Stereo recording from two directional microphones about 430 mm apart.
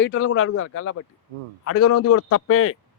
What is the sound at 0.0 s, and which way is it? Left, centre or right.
A man's voice, left.